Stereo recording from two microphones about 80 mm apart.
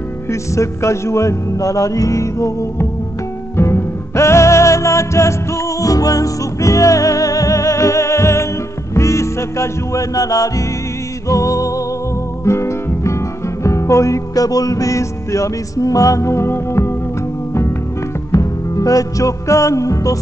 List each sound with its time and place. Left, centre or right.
0.3 s music: left
18.3 s music: left